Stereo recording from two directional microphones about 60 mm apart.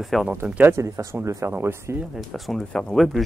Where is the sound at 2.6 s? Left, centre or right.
Centre.